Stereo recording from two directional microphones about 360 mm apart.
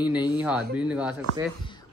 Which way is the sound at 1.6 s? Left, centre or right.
Centre.